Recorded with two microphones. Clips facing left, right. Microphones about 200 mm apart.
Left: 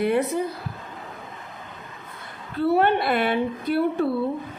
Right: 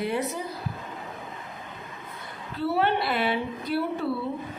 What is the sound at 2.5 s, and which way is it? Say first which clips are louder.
Speech: left 5 dB; 50° left (ahead or behind).